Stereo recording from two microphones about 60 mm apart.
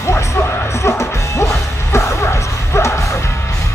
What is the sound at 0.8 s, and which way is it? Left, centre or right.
Music, left.